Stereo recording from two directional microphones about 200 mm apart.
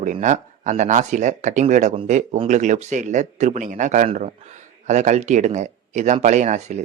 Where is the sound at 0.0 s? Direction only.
40° right (ahead or behind).